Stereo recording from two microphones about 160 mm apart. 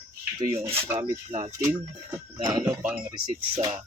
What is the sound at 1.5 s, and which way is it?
Speech, 20° right (ahead or behind).